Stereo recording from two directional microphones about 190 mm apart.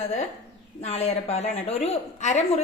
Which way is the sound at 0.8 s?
35° left (ahead or behind).